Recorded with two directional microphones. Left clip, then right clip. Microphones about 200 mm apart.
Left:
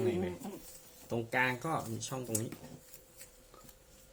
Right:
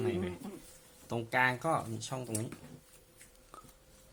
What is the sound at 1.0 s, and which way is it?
Speech, 35° right (ahead or behind).